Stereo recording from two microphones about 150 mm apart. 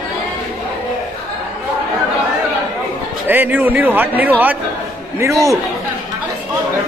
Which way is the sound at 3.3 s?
10° right (ahead or behind).